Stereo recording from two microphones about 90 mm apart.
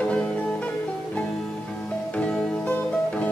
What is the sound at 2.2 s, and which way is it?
Music, 10° left (ahead or behind).